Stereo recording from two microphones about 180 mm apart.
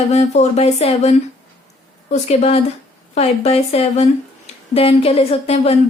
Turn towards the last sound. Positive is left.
turn(degrees=35)  # may be behind; listen again after turning